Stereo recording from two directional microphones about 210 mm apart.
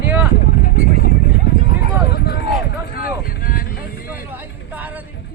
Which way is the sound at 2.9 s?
45° left (ahead or behind).